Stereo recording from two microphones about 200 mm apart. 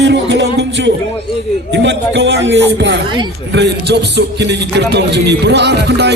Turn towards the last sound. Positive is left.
turn(degrees=-55)  # may be behind; listen again after turning